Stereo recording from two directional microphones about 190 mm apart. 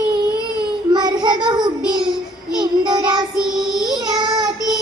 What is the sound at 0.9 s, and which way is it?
Child singing, 20° right (ahead or behind).